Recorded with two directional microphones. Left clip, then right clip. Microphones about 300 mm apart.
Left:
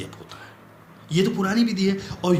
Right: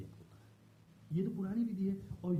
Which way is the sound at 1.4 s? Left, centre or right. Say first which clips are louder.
Left 17 dB; centre.